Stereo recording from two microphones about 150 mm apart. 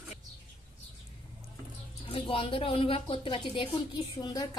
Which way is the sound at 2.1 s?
35° left (ahead or behind).